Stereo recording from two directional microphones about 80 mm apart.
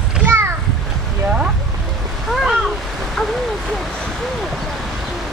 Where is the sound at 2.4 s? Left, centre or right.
Centre.